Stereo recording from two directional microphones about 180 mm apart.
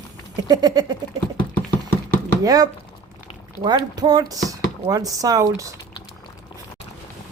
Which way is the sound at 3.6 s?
25° right (ahead or behind).